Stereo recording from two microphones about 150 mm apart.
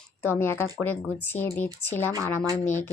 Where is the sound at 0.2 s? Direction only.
15° left (ahead or behind).